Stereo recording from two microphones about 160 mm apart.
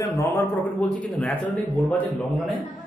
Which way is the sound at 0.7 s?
10° left (ahead or behind).